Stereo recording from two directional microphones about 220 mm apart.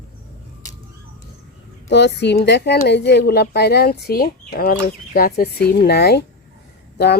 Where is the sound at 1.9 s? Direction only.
50° left (ahead or behind).